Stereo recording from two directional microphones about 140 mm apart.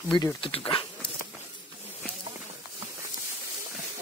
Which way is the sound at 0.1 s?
30° left (ahead or behind).